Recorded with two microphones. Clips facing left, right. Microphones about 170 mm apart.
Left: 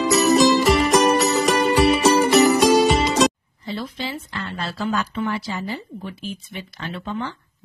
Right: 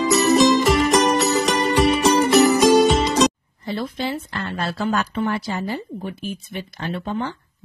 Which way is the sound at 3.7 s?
55° right (ahead or behind).